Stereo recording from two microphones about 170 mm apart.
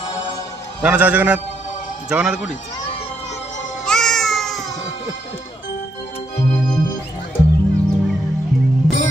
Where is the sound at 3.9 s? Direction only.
5° left (ahead or behind).